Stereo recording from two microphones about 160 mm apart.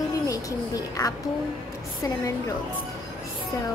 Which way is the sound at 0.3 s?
20° left (ahead or behind).